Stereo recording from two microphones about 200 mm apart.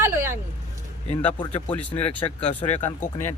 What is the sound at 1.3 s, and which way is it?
Speech, 25° left (ahead or behind).